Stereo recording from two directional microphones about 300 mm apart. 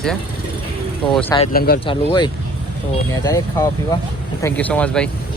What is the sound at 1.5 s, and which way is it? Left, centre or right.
Speech, left.